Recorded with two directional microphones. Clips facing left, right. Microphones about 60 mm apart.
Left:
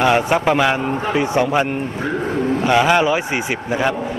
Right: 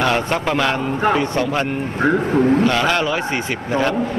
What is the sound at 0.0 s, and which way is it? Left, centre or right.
A man's voice, centre.